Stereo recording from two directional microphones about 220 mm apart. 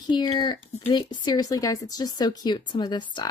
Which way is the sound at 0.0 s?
20° left (ahead or behind).